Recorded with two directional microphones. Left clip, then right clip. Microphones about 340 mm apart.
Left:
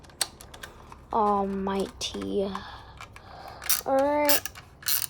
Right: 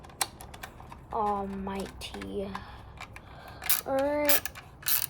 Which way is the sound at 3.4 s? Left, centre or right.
Centre.